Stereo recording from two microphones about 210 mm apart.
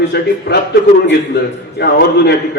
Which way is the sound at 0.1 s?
55° left (ahead or behind).